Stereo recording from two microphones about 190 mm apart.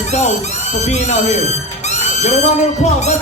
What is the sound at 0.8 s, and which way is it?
Music, 35° left (ahead or behind).